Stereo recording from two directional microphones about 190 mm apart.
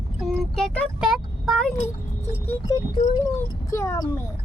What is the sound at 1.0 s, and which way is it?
Speech, centre (ahead or behind).